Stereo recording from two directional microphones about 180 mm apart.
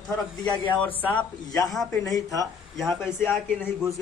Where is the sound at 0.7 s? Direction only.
10° left (ahead or behind).